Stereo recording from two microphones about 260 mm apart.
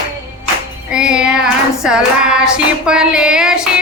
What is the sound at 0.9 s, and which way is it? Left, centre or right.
Music, centre.